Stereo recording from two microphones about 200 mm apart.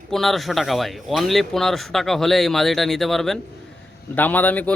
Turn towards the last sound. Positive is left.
turn(degrees=10)  # may be behind; listen again after turning